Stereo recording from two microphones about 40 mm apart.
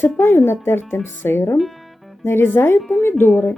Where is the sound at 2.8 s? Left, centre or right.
Centre.